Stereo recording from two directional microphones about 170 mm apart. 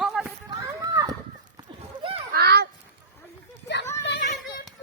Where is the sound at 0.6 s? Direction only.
20° right (ahead or behind).